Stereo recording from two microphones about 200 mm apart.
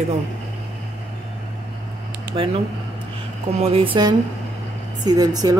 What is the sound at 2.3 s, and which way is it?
Speech, 25° right (ahead or behind).